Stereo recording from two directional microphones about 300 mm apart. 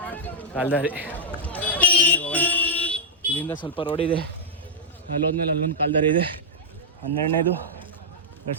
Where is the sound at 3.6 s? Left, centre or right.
Centre.